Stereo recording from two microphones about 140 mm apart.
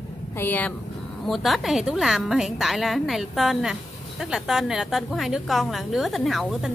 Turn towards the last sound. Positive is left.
turn(degrees=0)  # may be behind; listen again after turning